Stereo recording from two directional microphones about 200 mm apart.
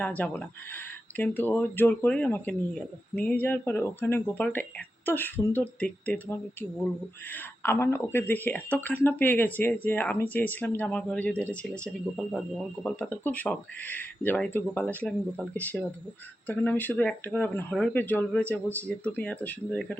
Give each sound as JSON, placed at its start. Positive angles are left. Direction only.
{"t": 0.0, "sound": "speech", "side_deg": 5}